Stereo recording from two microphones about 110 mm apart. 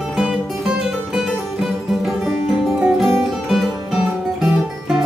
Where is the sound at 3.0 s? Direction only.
Centre (ahead or behind).